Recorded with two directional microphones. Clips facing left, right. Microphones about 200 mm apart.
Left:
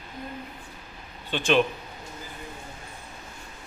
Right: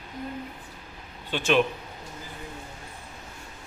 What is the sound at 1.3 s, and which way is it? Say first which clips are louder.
Speech: even; 5° right (ahead or behind).